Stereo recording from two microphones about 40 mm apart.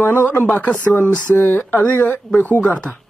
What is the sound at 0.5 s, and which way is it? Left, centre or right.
Speech, left.